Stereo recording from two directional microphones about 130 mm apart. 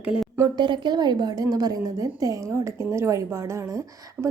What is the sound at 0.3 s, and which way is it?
Speech, 30° right (ahead or behind).